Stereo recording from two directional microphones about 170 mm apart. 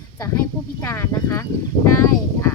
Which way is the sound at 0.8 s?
15° left (ahead or behind).